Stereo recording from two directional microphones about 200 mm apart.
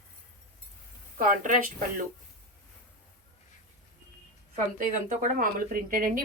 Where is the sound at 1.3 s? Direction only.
40° right (ahead or behind).